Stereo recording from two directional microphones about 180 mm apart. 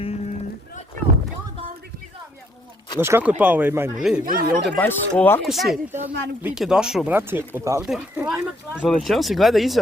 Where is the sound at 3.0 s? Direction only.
10° right (ahead or behind).